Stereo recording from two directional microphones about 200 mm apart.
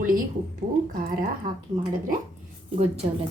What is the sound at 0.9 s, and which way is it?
Speech, 45° right (ahead or behind).